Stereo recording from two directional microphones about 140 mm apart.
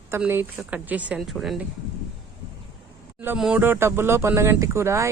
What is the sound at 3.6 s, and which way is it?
Speech, 15° right (ahead or behind).